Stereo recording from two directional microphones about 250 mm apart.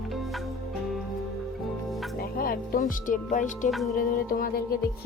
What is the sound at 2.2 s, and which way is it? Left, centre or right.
Speech, left.